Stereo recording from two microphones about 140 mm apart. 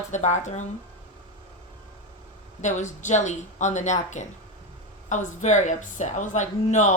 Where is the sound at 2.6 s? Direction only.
60° left (ahead or behind).